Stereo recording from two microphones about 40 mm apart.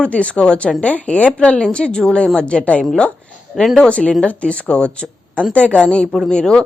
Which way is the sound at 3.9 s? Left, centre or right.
Left.